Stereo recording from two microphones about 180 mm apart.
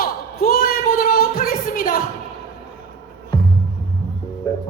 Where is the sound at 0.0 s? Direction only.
55° left (ahead or behind).